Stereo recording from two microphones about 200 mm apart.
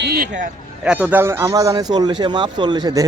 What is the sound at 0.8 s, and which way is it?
Speech, 5° right (ahead or behind).